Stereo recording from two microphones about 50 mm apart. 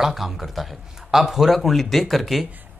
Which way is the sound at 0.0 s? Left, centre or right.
Centre.